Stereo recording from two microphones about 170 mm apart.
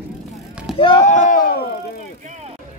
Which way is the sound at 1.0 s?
45° left (ahead or behind).